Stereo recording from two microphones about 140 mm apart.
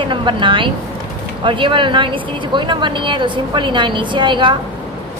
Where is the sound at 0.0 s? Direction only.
35° right (ahead or behind).